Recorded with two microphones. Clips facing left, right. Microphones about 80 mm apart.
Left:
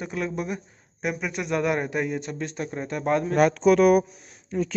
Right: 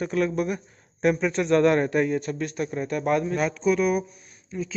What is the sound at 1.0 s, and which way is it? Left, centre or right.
A man's voice, centre.